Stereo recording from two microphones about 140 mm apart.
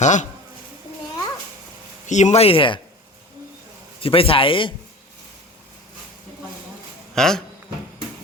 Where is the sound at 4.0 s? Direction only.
40° left (ahead or behind).